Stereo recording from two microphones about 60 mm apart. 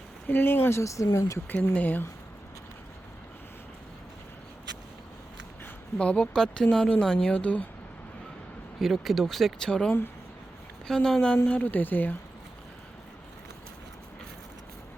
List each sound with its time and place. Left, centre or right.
0.3 s speech: left
0.8 s speech: left
1.7 s speech: left
6.0 s speech: centre
8.8 s speech: centre
11.4 s speech: left